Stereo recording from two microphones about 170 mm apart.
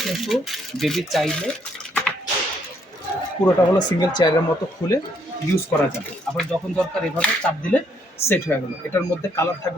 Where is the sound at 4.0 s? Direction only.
25° left (ahead or behind).